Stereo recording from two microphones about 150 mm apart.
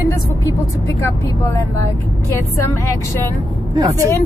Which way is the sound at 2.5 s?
20° left (ahead or behind).